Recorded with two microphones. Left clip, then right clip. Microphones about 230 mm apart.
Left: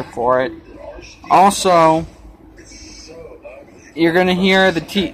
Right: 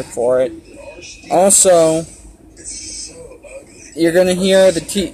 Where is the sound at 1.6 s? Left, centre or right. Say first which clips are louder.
Right 1 dB; left.